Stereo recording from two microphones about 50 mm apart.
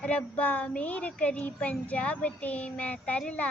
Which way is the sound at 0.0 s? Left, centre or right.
Left.